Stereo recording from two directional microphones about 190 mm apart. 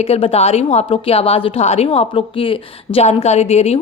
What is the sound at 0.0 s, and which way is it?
Speech, 30° left (ahead or behind).